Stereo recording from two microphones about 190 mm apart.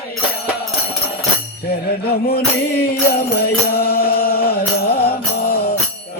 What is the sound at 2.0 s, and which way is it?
Mantra, 55° left (ahead or behind).